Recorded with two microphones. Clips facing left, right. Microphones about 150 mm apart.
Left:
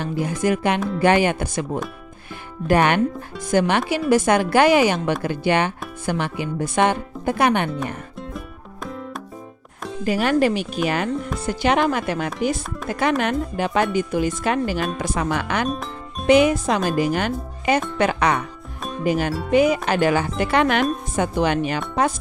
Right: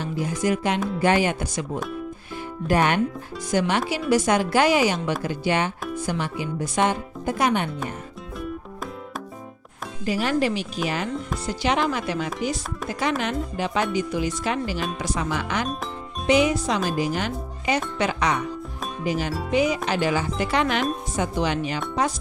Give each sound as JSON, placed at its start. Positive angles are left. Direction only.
{"t": 0.0, "sound": "speech", "side_deg": 55}
{"t": 2.7, "sound": "speech", "side_deg": 65}
{"t": 10.0, "sound": "speech", "side_deg": 60}